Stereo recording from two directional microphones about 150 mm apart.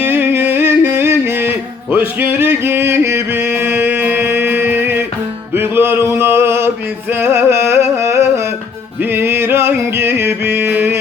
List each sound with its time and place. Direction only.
0.0 s music: 15° right (ahead or behind)
5.5 s a sound: 15° right (ahead or behind)
7.1 s music: 15° right (ahead or behind)